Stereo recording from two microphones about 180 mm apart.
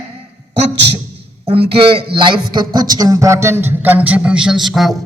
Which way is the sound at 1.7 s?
30° right (ahead or behind).